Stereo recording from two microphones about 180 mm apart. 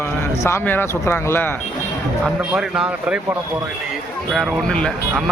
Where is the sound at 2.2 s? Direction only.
5° right (ahead or behind).